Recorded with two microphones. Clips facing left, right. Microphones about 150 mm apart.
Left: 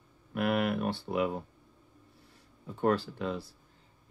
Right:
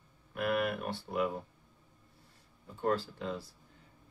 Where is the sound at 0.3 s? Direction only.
80° left.